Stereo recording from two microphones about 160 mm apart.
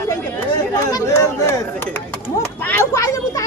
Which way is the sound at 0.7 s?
20° left (ahead or behind).